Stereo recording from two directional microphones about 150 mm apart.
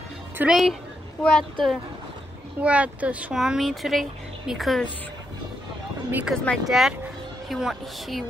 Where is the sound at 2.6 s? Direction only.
10° right (ahead or behind).